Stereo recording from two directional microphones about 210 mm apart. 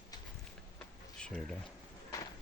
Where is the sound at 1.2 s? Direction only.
5° left (ahead or behind).